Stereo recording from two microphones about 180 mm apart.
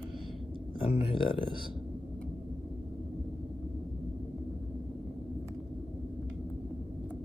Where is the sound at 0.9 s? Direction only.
30° left (ahead or behind).